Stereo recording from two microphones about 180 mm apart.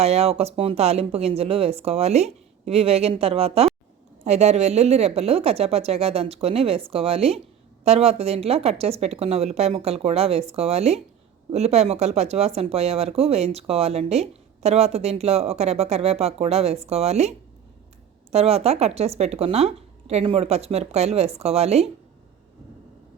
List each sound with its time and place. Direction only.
0.0 s speech: 35° right (ahead or behind)